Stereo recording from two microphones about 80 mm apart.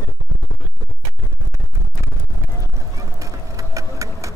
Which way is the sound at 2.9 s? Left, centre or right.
Right.